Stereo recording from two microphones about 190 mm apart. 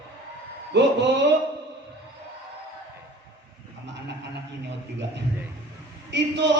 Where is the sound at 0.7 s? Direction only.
65° right (ahead or behind).